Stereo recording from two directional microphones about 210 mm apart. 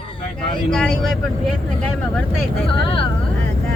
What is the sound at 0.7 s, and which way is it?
Speech, 5° left (ahead or behind).